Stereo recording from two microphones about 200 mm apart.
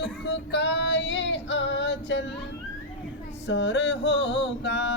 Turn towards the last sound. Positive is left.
turn(degrees=60)  # may be behind; listen again after turning